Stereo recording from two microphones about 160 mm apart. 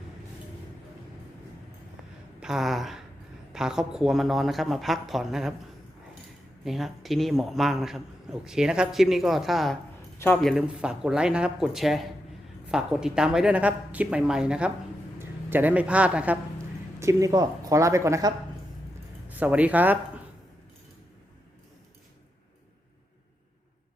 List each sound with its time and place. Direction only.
2.4 s a man's voice: centre (ahead or behind)
6.7 s a man's voice: centre (ahead or behind)
10.2 s speech: 10° left (ahead or behind)
10.4 s a man's voice: 5° right (ahead or behind)
17.0 s speech: 20° right (ahead or behind)
19.3 s speech: 10° right (ahead or behind)